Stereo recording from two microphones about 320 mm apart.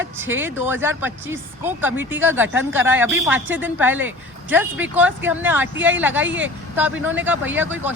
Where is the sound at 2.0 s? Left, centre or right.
Right.